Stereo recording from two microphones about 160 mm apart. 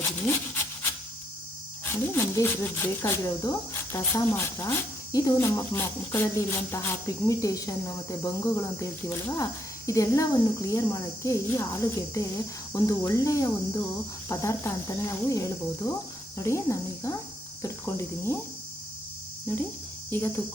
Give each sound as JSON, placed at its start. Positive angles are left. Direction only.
{"t": 0.3, "sound": "rub", "side_deg": 15}
{"t": 1.8, "sound": "speech", "side_deg": 15}
{"t": 17.6, "sound": "cricket", "side_deg": 15}
{"t": 19.5, "sound": "cricket", "side_deg": 15}